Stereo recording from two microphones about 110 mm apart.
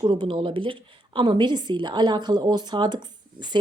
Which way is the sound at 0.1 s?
50° right (ahead or behind).